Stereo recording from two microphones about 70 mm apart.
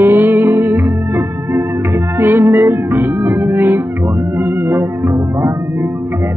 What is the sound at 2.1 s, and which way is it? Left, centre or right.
Music, right.